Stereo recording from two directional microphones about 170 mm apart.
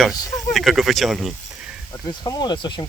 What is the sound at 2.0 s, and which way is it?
Speech, 25° left (ahead or behind).